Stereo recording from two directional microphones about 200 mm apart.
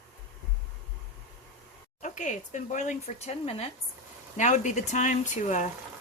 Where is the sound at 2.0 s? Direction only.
40° left (ahead or behind).